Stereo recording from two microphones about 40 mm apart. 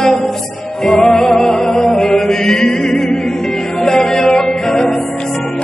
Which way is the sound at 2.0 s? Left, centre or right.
Centre.